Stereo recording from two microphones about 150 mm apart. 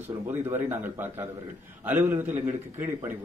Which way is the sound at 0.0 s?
15° right (ahead or behind).